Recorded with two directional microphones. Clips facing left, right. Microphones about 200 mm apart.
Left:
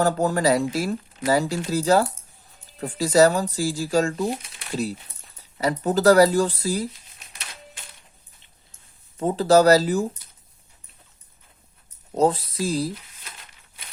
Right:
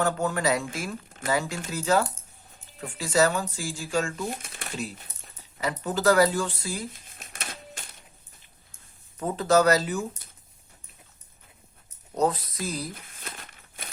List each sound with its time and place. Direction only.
0.0 s speech: 35° left (ahead or behind)
4.4 s a sound: 50° right (ahead or behind)
4.7 s speech: 35° left (ahead or behind)
7.0 s typewriter: 50° right (ahead or behind)
9.1 s speech: 30° left (ahead or behind)
12.1 s speech: 30° left (ahead or behind)
13.1 s crumpling: 55° right (ahead or behind)